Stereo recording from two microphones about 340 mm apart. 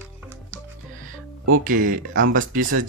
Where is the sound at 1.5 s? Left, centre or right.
Right.